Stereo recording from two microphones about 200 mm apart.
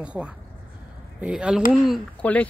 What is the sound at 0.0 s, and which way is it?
Speech, 5° right (ahead or behind).